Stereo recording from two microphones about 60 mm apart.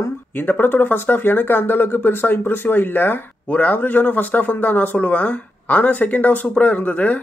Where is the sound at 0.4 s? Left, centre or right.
Left.